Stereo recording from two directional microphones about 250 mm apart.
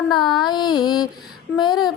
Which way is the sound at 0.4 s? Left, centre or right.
Centre.